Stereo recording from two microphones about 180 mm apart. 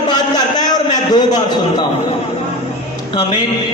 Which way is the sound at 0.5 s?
20° left (ahead or behind).